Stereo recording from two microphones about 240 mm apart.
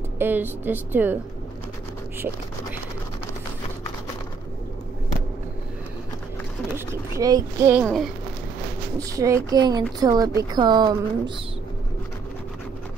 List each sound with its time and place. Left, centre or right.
0.2 s speech: centre
2.1 s speech: centre
6.9 s speech: centre
7.8 s speech: centre
8.9 s speech: centre